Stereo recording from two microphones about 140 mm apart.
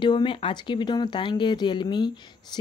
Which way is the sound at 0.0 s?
35° left (ahead or behind).